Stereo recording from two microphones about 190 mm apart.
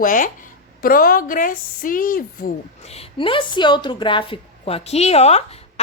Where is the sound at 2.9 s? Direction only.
30° left (ahead or behind).